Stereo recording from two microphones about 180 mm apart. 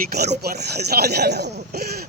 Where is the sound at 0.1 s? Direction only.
65° right (ahead or behind).